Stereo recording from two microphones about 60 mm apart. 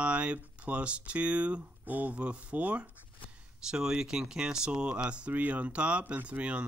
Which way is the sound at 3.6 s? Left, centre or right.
Centre.